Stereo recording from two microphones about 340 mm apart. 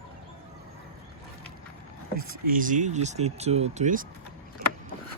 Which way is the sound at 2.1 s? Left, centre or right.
Right.